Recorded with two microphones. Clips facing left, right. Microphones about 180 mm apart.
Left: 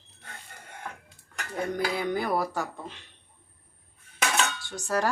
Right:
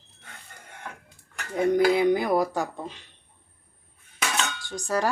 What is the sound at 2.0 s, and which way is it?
Speech, 15° right (ahead or behind).